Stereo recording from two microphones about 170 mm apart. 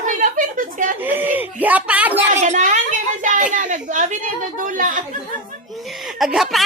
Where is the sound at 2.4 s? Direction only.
45° right (ahead or behind).